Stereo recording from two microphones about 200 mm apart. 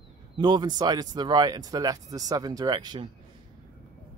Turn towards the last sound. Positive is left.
turn(degrees=-20)  # may be behind; listen again after turning